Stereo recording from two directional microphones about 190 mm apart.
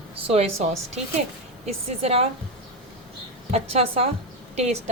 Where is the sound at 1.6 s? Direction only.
30° right (ahead or behind).